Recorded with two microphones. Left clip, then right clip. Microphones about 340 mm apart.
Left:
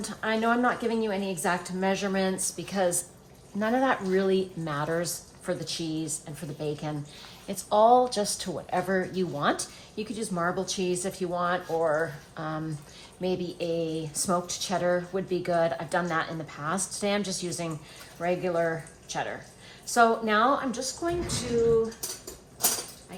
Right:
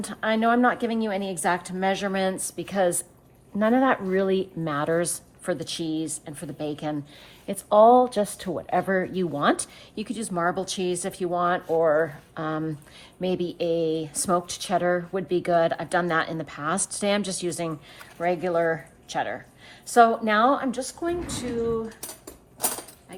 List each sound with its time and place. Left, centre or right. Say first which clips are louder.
0.0 s speech: right 4 dB; right